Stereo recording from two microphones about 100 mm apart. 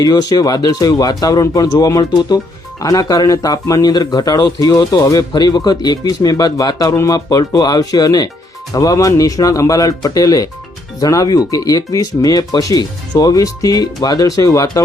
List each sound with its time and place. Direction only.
0.0 s speech: 45° left (ahead or behind)